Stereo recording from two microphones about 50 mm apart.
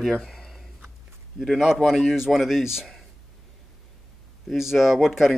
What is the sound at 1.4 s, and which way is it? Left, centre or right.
Speech, centre.